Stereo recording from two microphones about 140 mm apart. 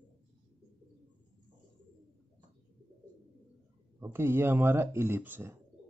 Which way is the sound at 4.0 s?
15° right (ahead or behind).